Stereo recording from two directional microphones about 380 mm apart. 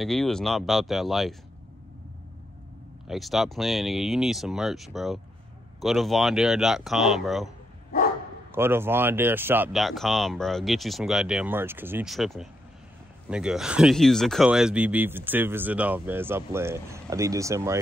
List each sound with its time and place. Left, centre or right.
0.0 s speech: centre
3.1 s speech: centre